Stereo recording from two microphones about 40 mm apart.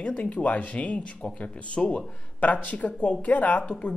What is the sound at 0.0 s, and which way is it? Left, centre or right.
Speech, left.